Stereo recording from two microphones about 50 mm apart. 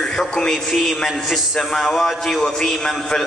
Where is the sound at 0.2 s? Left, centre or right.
Centre.